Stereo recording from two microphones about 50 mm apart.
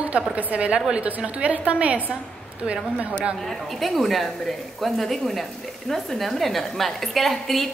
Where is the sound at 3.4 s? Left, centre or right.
Centre.